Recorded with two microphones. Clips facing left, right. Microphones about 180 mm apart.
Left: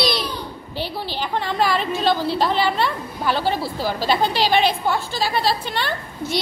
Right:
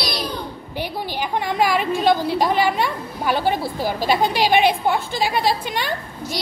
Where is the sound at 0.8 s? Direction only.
15° right (ahead or behind).